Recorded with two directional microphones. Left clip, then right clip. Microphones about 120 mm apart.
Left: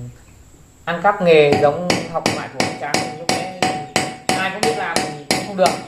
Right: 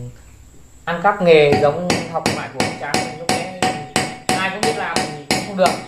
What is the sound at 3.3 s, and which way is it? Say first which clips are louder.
Hammer: even; 5° left (ahead or behind).